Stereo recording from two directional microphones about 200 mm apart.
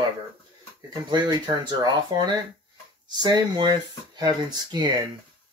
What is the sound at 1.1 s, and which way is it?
Speech, 20° right (ahead or behind).